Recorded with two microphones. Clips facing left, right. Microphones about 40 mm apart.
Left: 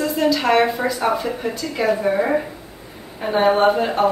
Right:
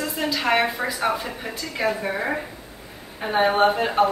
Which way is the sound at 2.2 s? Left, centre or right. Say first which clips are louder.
Left 7 dB; centre.